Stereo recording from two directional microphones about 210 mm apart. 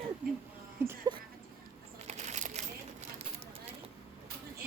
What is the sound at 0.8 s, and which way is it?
Speech, 10° right (ahead or behind).